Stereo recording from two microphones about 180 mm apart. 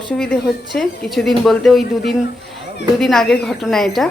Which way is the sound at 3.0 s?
Centre (ahead or behind).